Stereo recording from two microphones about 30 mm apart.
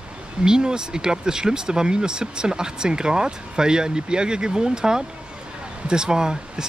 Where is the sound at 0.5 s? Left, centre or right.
Right.